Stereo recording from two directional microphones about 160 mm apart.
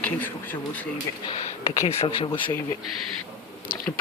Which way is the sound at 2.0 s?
35° left (ahead or behind).